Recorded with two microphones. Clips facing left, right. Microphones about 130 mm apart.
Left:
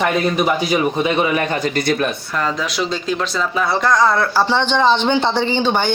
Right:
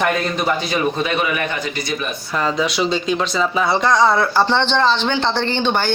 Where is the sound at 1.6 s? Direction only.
55° left (ahead or behind).